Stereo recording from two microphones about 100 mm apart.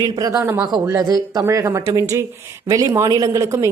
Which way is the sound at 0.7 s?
50° right (ahead or behind).